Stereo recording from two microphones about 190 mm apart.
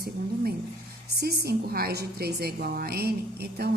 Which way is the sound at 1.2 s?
55° right (ahead or behind).